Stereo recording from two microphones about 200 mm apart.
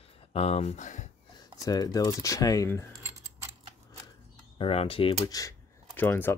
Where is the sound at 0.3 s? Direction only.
30° left (ahead or behind).